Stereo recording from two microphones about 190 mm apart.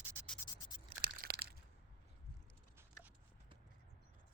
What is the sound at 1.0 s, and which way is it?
Crushing, 55° right (ahead or behind).